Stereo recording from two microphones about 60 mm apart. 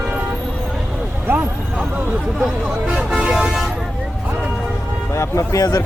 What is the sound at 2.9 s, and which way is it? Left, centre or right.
Speech, centre.